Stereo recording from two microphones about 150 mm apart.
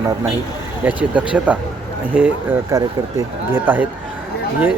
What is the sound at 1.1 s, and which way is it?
Speech, 10° right (ahead or behind).